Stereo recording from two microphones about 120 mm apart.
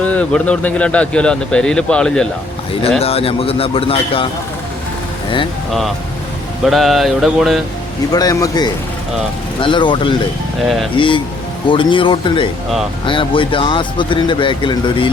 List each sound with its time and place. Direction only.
0.0 s speech: 10° left (ahead or behind)
3.0 s speech: 55° left (ahead or behind)
6.7 s a sound: centre (ahead or behind)
8.1 s a man's voice: 30° left (ahead or behind)
9.6 s speech: 45° left (ahead or behind)